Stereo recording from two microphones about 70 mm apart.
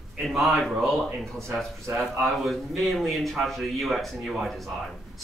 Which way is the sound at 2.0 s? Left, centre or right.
Centre.